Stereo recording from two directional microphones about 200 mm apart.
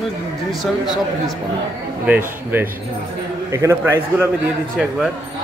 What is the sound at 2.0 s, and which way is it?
A man's voice, 10° right (ahead or behind).